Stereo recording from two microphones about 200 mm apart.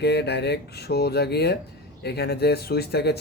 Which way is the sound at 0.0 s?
55° left (ahead or behind).